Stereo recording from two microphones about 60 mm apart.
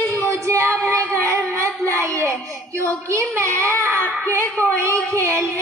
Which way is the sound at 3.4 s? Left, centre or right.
Right.